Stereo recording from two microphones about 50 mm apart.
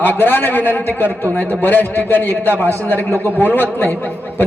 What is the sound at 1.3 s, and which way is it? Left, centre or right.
A man's voice, left.